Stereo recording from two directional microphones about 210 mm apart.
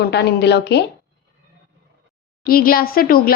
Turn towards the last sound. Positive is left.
turn(degrees=45)  # may be behind; listen again after turning